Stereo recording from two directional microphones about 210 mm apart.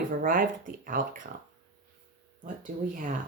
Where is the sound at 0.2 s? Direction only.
40° right (ahead or behind).